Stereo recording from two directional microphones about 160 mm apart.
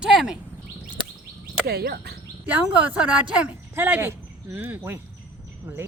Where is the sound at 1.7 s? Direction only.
85° right.